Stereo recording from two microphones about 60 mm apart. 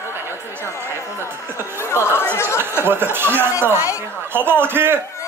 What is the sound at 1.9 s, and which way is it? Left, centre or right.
Chatter, left.